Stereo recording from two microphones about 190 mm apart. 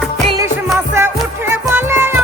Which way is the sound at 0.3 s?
20° right (ahead or behind).